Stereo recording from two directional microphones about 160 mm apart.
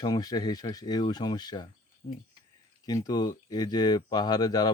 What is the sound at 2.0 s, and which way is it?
Speech, 40° left (ahead or behind).